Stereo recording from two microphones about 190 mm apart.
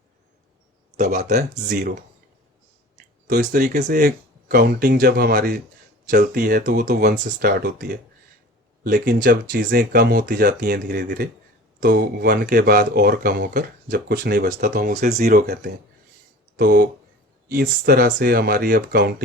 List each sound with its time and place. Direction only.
0.9 s speech: 40° right (ahead or behind)
1.2 s speech: 55° right (ahead or behind)
3.2 s speech: 50° right (ahead or behind)